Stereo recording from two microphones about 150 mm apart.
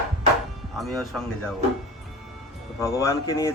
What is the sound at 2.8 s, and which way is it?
Speech, 20° left (ahead or behind).